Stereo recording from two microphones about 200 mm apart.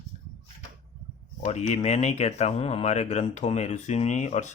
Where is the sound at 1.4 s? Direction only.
35° left (ahead or behind).